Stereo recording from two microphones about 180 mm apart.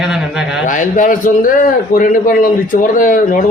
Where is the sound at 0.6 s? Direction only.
45° left (ahead or behind).